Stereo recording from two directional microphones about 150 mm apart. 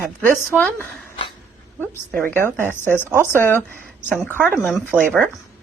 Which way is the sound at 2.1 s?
15° left (ahead or behind).